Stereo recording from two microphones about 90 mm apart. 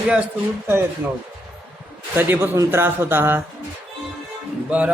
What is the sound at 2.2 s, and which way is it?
A man's voice, 25° right (ahead or behind).